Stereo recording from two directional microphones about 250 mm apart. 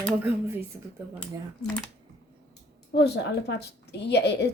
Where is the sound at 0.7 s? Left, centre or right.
Centre.